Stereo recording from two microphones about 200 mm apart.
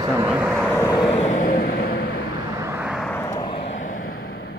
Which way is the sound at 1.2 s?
40° left (ahead or behind).